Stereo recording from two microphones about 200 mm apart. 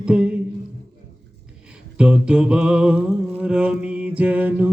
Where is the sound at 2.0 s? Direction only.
5° right (ahead or behind).